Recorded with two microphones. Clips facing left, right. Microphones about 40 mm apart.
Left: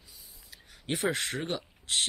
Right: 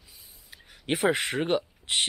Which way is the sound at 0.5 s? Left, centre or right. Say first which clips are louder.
Right 5 dB; right.